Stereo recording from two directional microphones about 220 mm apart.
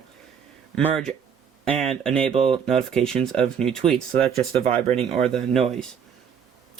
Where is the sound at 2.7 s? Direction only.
5° left (ahead or behind).